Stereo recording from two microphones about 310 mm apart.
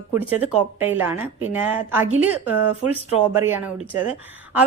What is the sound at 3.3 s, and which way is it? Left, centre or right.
Speech, centre.